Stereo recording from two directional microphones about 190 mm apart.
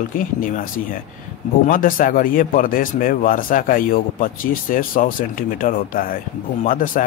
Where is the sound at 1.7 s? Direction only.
45° left (ahead or behind).